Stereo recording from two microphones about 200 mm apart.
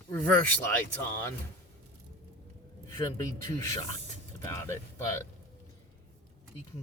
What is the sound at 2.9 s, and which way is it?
Speech, 15° left (ahead or behind).